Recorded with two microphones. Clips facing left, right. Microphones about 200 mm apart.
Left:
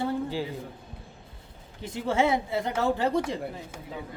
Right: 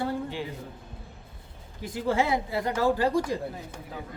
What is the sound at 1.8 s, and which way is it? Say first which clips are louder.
A man's voice: left 1 dB; 25° left (ahead or behind).